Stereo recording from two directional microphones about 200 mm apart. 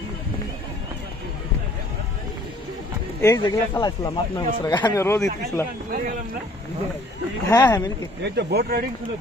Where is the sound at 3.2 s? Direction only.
15° left (ahead or behind).